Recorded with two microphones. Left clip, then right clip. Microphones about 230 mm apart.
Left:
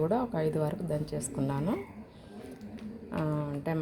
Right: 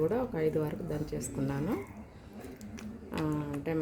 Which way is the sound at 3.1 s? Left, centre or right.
Centre.